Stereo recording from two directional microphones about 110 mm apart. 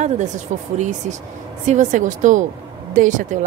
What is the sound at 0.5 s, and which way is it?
Speech, 90° right.